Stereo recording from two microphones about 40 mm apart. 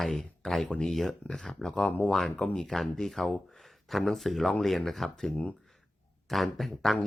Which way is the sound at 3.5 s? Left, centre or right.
Centre.